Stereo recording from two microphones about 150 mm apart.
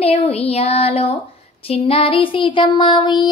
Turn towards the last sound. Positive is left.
turn(degrees=30)  # may be behind; listen again after turning